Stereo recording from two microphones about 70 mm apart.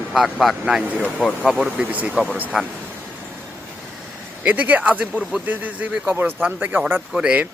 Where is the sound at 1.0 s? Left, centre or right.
Left.